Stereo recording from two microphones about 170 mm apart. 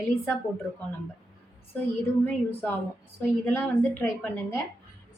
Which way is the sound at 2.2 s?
10° left (ahead or behind).